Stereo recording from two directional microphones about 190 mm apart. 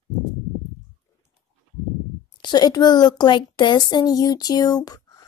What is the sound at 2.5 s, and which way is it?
Speech, 20° left (ahead or behind).